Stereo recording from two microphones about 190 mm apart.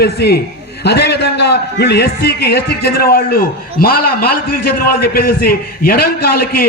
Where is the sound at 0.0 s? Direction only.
55° left (ahead or behind).